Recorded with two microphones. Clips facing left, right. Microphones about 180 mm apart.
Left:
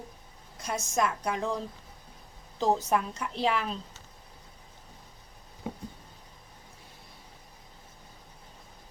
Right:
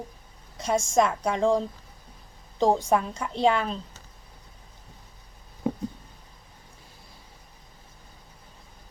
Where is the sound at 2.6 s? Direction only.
30° right (ahead or behind).